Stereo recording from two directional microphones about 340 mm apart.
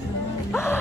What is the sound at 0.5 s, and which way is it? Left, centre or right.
Music, centre.